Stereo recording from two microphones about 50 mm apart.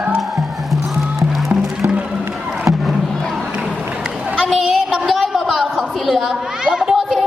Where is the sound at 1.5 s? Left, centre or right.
Right.